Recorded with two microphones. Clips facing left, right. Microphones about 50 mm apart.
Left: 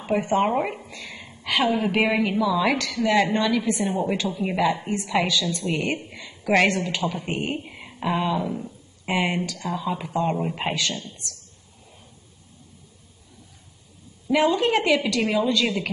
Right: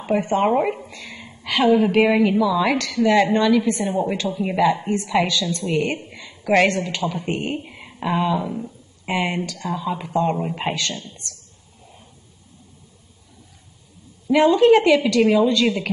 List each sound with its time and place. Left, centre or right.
0.0 s speech: centre
0.5 s speech: centre
0.7 s a woman's voice: centre
14.2 s a woman's voice: centre